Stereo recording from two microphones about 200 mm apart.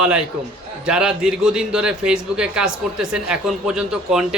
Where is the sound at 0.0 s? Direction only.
5° right (ahead or behind).